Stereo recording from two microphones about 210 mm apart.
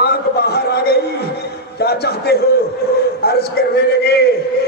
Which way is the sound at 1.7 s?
50° left (ahead or behind).